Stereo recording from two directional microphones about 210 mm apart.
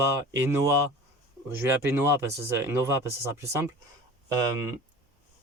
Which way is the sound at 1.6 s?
10° right (ahead or behind).